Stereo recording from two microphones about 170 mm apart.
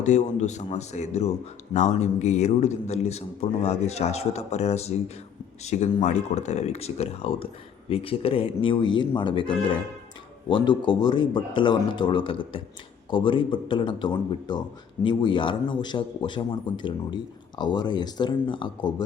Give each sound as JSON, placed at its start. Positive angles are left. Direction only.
{"t": 0.0, "sound": "a man's voice", "side_deg": 45}